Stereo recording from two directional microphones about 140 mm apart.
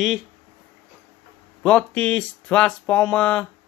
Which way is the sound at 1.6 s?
10° left (ahead or behind).